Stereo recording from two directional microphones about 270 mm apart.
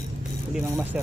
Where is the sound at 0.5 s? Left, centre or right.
Centre.